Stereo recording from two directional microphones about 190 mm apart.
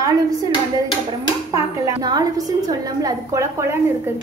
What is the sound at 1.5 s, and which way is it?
A woman's voice, 20° right (ahead or behind).